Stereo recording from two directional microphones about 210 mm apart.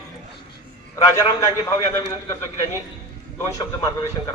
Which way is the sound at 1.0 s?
15° left (ahead or behind).